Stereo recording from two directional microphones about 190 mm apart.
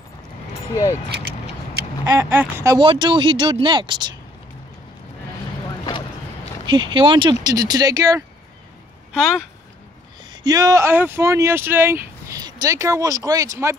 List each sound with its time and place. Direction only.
1.1 s vehicle: 55° right (ahead or behind)
2.1 s speech: 10° right (ahead or behind)
5.9 s a sound: 25° left (ahead or behind)
6.6 s speech: 25° right (ahead or behind)
9.1 s speech: centre (ahead or behind)
10.3 s speech: 20° right (ahead or behind)